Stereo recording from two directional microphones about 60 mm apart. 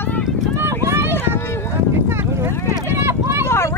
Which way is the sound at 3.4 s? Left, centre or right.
Left.